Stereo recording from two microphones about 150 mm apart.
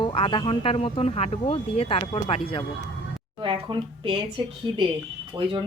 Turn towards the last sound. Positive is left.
turn(degrees=-35)  # may be behind; listen again after turning